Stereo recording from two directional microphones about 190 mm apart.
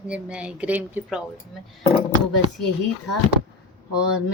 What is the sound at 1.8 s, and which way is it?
Speech, 30° left (ahead or behind).